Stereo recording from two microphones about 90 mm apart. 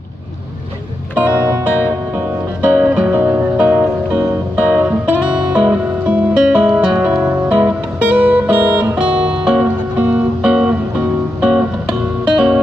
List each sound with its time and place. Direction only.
1.1 s music: 15° right (ahead or behind)